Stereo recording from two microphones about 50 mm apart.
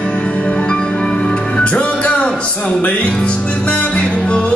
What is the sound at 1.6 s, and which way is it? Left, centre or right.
Music, left.